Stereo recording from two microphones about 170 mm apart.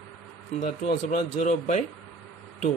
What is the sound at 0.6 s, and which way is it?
Speech, 45° left (ahead or behind).